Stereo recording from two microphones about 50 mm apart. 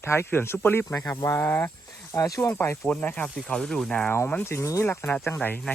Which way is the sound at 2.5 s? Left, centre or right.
Left.